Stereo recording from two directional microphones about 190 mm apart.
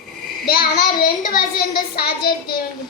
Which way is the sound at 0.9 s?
45° left (ahead or behind).